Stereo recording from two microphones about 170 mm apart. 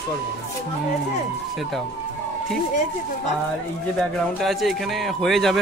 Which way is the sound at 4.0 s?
Centre (ahead or behind).